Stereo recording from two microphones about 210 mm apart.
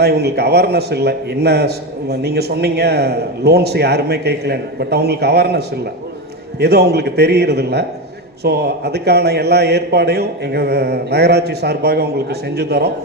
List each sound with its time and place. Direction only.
0.0 s a man's voice: 50° right (ahead or behind)